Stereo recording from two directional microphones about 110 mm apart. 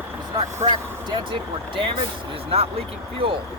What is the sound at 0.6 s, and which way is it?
Speech, 70° right (ahead or behind).